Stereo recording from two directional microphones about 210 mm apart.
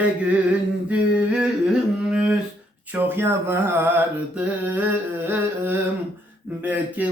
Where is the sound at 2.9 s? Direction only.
10° right (ahead or behind).